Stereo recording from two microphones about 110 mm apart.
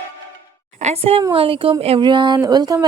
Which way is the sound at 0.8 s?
75° right (ahead or behind).